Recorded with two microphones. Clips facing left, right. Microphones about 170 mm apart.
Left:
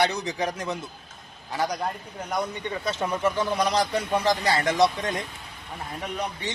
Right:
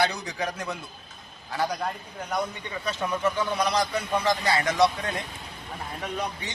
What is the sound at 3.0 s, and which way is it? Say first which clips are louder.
A man's voice: left 1 dB; 30° left (ahead or behind).